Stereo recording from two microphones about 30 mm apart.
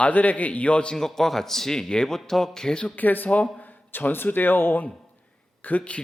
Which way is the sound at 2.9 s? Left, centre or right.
Left.